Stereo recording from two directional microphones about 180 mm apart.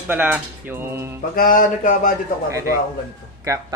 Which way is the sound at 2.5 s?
15° right (ahead or behind).